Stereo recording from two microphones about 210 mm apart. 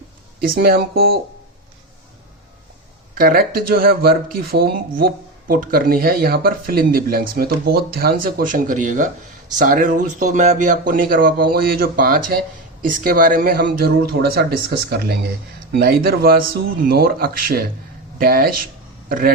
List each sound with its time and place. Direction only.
0.3 s speech: 45° right (ahead or behind)
3.2 s speech: 45° right (ahead or behind)